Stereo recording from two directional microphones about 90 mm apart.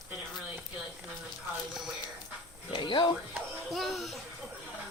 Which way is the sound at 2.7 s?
65° left (ahead or behind).